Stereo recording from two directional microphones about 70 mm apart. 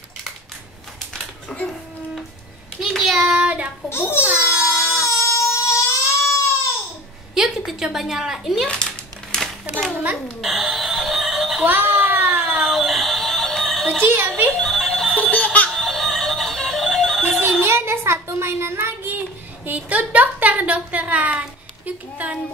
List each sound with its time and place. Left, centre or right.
1.1 s a sound: centre
2.8 s child singing: centre
3.9 s a child's voice: left
4.7 s baby cry: centre
5.0 s baby cry: left
7.3 s a woman's voice: centre
9.3 s a sound: centre
11.6 s baby cry: right
12.6 s music: centre
14.0 s a child's voice: right
14.5 s music: centre
15.0 s music: centre
15.7 s music: centre
17.4 s a child's voice: right; by 22.4 s centre